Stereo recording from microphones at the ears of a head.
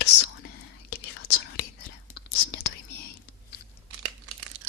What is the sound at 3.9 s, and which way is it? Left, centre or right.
Crumpling, right.